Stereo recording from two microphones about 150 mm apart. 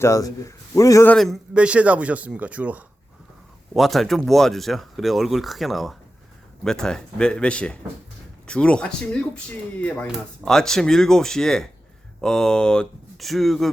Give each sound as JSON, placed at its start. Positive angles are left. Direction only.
{"t": 0.0, "sound": "a man's voice", "side_deg": 20}
{"t": 1.0, "sound": "a man's voice", "side_deg": 5}
{"t": 3.8, "sound": "speech", "side_deg": 0}